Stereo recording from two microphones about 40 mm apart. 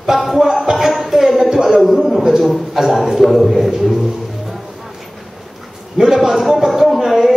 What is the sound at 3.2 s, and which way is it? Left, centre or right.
Speech, centre.